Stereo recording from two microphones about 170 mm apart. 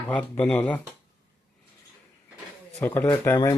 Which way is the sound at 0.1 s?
10° left (ahead or behind).